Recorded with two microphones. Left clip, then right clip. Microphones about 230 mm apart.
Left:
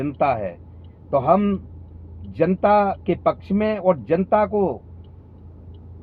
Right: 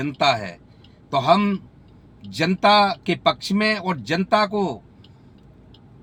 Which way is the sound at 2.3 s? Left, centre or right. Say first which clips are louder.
Even; centre.